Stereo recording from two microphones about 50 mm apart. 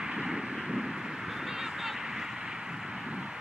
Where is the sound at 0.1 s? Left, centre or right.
Centre.